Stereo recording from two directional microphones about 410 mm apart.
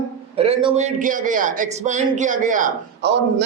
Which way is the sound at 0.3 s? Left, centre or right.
Centre.